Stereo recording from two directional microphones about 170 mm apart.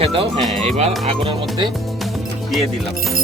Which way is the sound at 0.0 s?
35° right (ahead or behind).